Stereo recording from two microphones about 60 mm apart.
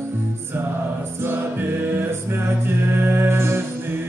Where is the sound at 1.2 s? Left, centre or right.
Right.